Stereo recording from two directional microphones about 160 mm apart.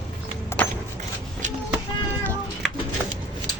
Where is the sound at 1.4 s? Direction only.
50° right (ahead or behind).